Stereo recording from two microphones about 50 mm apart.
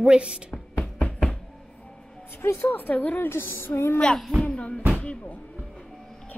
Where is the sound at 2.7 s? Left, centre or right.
Left.